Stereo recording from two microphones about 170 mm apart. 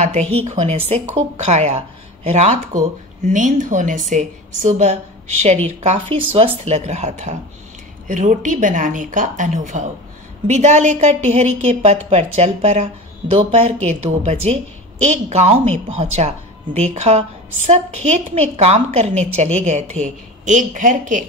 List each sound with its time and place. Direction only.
0.0 s a woman's voice: 40° right (ahead or behind)